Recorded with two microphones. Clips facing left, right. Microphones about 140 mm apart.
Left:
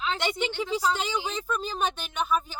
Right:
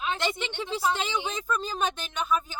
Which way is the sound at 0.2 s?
15° left (ahead or behind).